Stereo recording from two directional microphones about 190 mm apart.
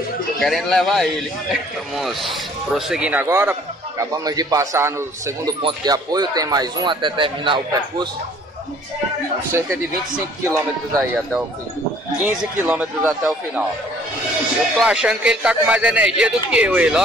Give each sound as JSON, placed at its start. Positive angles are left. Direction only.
{"t": 0.4, "sound": "speech", "side_deg": 0}
{"t": 11.0, "sound": "speech", "side_deg": 0}
{"t": 14.8, "sound": "speech", "side_deg": -5}